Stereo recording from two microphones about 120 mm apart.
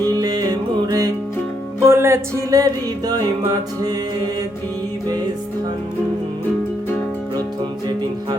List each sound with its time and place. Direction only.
0.1 s music: 30° right (ahead or behind)
1.8 s music: 20° right (ahead or behind)